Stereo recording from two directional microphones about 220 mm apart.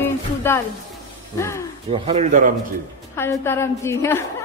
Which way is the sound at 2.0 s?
30° right (ahead or behind).